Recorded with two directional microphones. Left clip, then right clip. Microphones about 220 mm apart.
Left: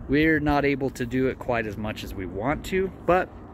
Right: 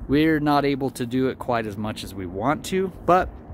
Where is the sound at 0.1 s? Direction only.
25° right (ahead or behind).